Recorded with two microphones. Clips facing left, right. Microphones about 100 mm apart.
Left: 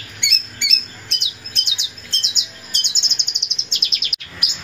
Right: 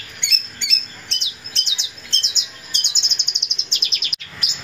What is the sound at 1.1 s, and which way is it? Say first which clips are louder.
Bird: left 1 dB; 15° left (ahead or behind).